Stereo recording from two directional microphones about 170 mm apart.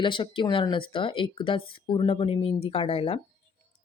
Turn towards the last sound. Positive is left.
turn(degrees=35)  # may be behind; listen again after turning